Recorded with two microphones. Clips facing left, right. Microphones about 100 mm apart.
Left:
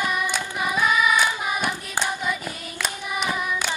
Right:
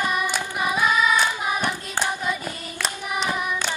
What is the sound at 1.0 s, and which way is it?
Hands, 10° left (ahead or behind).